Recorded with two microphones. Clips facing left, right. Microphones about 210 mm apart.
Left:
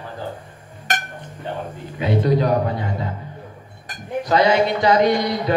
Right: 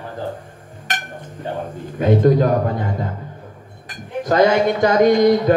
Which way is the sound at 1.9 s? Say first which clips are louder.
Right 5 dB; 50° right (ahead or behind).